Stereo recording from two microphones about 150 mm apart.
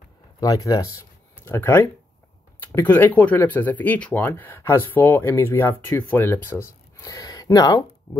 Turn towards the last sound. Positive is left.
turn(degrees=25)  # may be behind; listen again after turning